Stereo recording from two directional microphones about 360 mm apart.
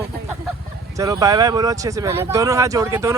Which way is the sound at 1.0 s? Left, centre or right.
Centre.